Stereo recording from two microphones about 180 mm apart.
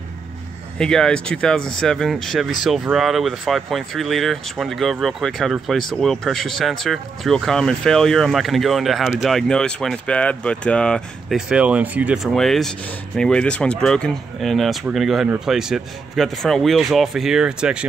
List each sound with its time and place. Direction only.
0.7 s speech: 5° left (ahead or behind)